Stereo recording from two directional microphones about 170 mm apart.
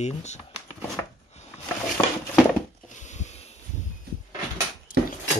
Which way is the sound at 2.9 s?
45° left (ahead or behind).